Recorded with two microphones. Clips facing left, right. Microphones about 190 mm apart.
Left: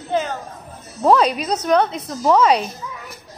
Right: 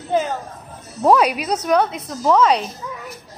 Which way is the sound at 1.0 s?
10° right (ahead or behind).